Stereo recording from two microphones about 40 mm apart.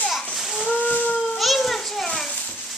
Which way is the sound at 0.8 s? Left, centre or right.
Left.